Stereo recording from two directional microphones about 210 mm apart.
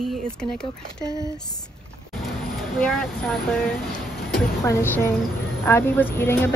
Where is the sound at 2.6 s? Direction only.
Centre (ahead or behind).